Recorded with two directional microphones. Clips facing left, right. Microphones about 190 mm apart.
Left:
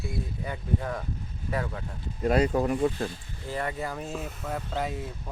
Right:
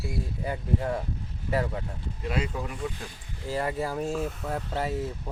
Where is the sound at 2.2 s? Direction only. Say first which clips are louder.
Left 8 dB; 45° left (ahead or behind).